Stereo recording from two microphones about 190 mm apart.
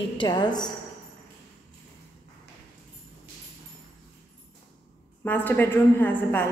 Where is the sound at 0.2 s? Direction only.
20° left (ahead or behind).